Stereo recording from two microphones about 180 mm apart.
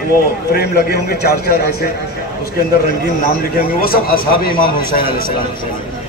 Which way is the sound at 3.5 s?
55° left (ahead or behind).